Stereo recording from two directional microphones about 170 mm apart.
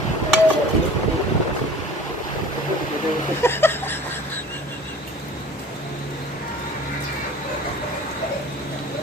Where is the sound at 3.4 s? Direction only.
15° left (ahead or behind).